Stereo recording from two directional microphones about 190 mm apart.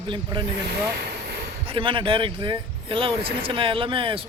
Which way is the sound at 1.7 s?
25° right (ahead or behind).